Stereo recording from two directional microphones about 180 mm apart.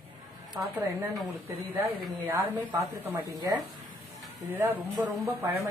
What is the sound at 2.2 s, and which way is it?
Speech, 10° right (ahead or behind).